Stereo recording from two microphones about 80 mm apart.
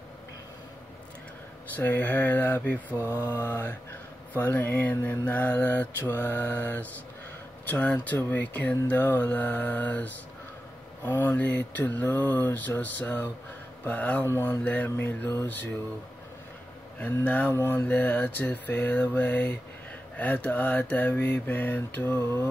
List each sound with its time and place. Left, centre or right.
1.8 s speech: left
3.0 s mantra: right
3.3 s speech: left
14.2 s speech: left
14.6 s speech: centre
17.0 s speech: centre